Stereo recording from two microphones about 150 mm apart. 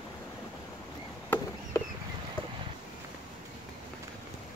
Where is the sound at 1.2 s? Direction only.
15° left (ahead or behind).